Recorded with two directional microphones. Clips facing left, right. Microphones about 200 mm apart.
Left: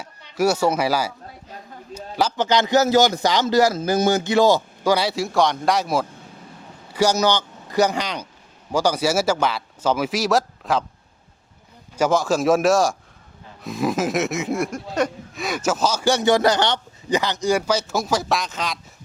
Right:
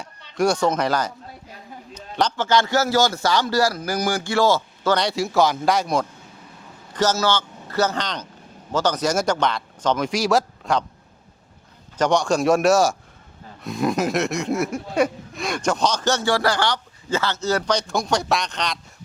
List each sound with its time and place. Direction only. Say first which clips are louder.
0.0 s speech: left 1 dB; 5° left (ahead or behind)
1.9 s a sound: even; 10° left (ahead or behind)
2.4 s a man's voice: left 3 dB; 20° left (ahead or behind); by 10.8 s centre (ahead or behind)
11.9 s speech: even; 5° left (ahead or behind)
15.4 s a man's voice: even; 5° left (ahead or behind)